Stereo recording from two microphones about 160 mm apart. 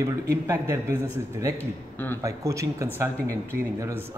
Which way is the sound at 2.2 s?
20° right (ahead or behind).